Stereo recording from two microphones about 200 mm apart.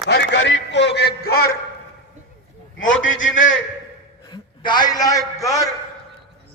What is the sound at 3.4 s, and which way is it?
Speech, 70° left (ahead or behind).